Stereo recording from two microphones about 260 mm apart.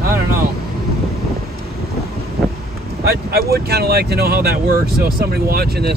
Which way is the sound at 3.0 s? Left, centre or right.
Right.